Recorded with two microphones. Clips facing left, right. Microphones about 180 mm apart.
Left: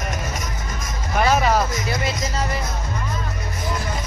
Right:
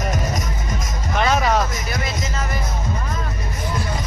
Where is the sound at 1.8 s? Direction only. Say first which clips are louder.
Left 2 dB; 25° left (ahead or behind).